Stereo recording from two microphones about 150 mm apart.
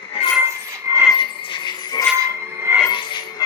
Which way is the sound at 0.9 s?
20° right (ahead or behind).